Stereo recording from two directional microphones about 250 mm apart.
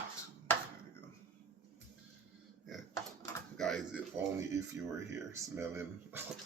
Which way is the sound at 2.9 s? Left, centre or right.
Centre.